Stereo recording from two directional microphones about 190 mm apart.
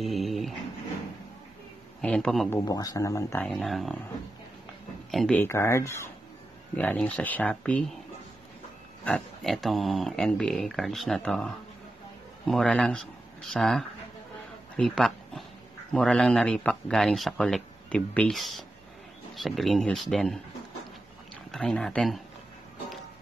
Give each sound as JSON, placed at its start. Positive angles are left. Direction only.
{"t": 0.0, "sound": "dog", "side_deg": 0}
{"t": 2.0, "sound": "a man's voice", "side_deg": 5}
{"t": 2.5, "sound": "speech", "side_deg": 20}
{"t": 3.4, "sound": "speech", "side_deg": 0}
{"t": 5.1, "sound": "speech", "side_deg": 5}
{"t": 9.0, "sound": "speech", "side_deg": 5}
{"t": 21.5, "sound": "speech", "side_deg": 0}